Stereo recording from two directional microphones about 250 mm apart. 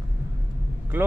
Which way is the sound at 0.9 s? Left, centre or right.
Centre.